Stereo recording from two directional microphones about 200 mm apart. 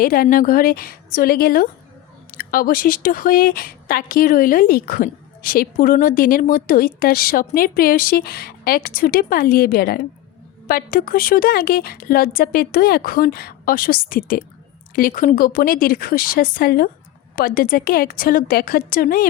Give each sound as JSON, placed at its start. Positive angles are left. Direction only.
{"t": 0.0, "sound": "speech", "side_deg": 45}